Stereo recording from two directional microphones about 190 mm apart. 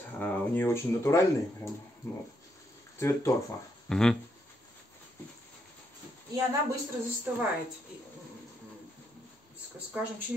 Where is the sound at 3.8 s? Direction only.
5° left (ahead or behind).